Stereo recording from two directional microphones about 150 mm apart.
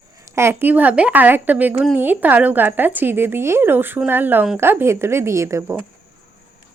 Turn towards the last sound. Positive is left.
turn(degrees=-20)  # may be behind; listen again after turning